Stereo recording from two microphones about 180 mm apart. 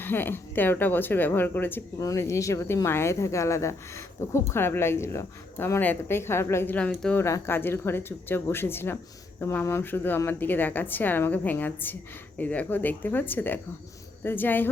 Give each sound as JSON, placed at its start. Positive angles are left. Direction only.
{"t": 0.0, "sound": "speech", "side_deg": 10}